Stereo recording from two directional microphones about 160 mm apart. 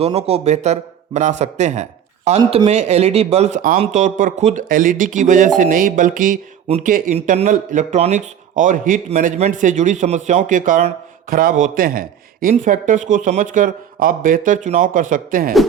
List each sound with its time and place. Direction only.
0.0 s a man's voice: 40° right (ahead or behind); by 15.5 s 60° right (ahead or behind)